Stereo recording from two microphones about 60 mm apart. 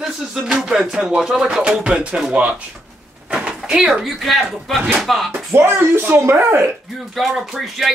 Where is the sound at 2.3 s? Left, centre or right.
Right.